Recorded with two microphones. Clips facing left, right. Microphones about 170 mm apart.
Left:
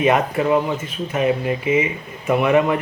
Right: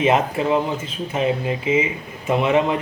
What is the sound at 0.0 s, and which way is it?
Speech, 25° right (ahead or behind).